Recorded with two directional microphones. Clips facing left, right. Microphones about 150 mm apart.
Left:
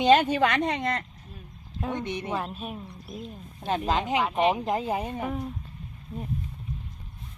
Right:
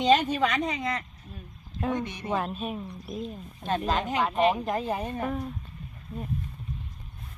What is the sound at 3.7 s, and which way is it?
Speech, 20° left (ahead or behind).